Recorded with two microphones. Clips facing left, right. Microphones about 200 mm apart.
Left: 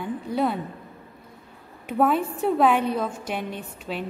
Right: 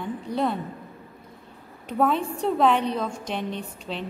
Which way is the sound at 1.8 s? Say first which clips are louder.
Left 1 dB; 5° left (ahead or behind).